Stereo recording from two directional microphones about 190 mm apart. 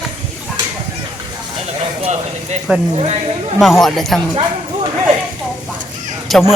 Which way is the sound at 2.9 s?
35° right (ahead or behind).